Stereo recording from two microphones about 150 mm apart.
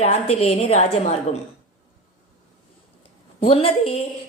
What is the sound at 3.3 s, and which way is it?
Speech, 35° left (ahead or behind).